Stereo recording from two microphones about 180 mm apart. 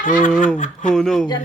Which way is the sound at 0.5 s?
45° left (ahead or behind).